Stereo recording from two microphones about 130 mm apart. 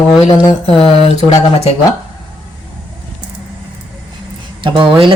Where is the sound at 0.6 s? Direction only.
50° left (ahead or behind).